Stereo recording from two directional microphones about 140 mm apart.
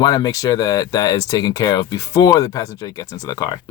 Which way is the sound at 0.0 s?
30° left (ahead or behind).